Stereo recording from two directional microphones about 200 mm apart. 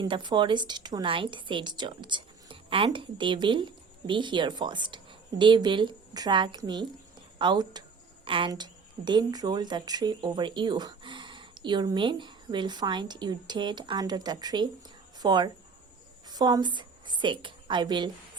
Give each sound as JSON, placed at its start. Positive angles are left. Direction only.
{"t": 0.0, "sound": "a woman's voice", "side_deg": -25}